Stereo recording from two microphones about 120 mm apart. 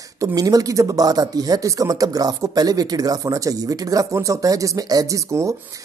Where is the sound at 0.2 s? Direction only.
30° right (ahead or behind).